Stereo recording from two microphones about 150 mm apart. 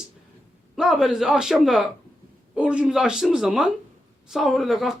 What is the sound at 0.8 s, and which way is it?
Speech, 5° right (ahead or behind).